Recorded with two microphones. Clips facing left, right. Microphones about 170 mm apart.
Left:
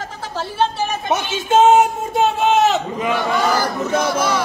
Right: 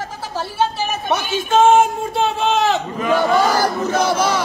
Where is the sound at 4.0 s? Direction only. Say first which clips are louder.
Right 4 dB; 55° left (ahead or behind).